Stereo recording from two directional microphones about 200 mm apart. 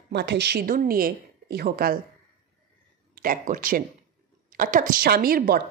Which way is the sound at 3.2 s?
45° right (ahead or behind).